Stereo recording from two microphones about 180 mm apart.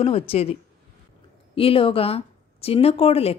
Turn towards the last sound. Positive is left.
turn(degrees=35)  # may be behind; listen again after turning